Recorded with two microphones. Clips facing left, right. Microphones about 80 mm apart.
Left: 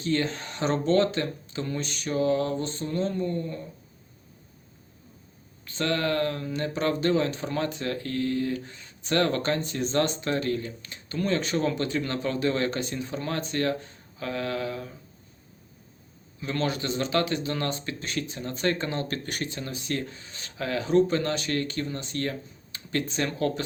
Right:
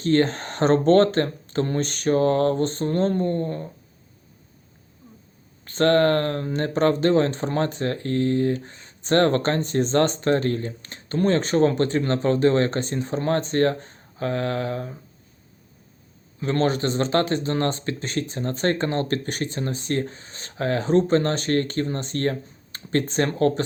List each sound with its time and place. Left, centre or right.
0.0 s speech: right
5.6 s speech: right
16.4 s speech: right